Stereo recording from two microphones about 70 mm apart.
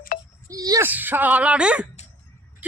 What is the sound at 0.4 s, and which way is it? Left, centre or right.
Wail, right.